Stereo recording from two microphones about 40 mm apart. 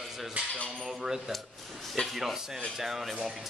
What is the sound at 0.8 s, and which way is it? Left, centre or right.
Speech, centre.